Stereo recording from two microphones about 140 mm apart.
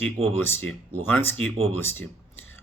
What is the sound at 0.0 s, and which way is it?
Speech, 15° left (ahead or behind).